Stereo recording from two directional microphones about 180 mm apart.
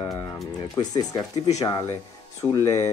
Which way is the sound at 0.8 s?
25° left (ahead or behind).